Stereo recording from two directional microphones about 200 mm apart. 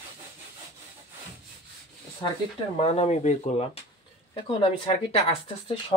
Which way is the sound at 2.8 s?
30° left (ahead or behind).